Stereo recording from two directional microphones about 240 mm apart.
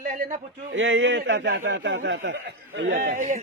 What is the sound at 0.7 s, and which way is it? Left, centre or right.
A man's voice, right.